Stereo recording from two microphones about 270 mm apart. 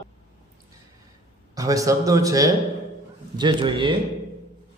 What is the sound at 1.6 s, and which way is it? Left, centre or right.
A man's voice, centre.